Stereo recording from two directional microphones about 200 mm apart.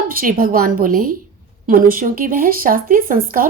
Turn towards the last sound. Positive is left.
turn(degrees=-45)  # may be behind; listen again after turning